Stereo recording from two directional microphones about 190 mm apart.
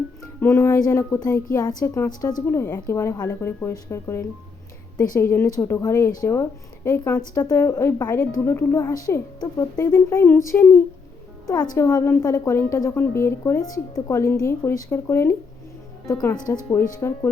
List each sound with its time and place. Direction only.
0.3 s a woman's voice: 10° left (ahead or behind)